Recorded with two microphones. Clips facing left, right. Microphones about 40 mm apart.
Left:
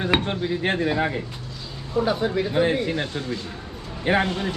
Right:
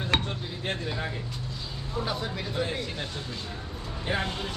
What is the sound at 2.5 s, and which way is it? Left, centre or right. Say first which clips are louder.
Speech: left 8 dB; left.